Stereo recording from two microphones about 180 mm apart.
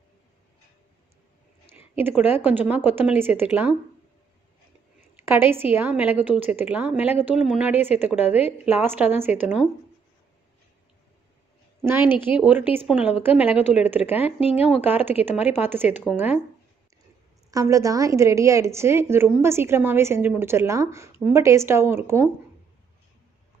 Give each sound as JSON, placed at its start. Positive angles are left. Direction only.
{"t": 2.0, "sound": "a woman's voice", "side_deg": -10}
{"t": 5.2, "sound": "a woman's voice", "side_deg": -10}
{"t": 11.8, "sound": "a woman's voice", "side_deg": -10}
{"t": 13.6, "sound": "speech", "side_deg": 40}
{"t": 13.8, "sound": "a woman's voice", "side_deg": -10}
{"t": 14.2, "sound": "speech", "side_deg": 35}
{"t": 14.8, "sound": "a woman's voice", "side_deg": -10}
{"t": 17.5, "sound": "a woman's voice", "side_deg": -20}